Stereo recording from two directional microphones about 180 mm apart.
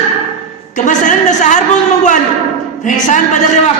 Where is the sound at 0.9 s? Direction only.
45° left (ahead or behind).